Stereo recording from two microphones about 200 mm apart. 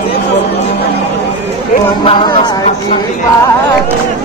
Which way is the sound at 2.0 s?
20° left (ahead or behind).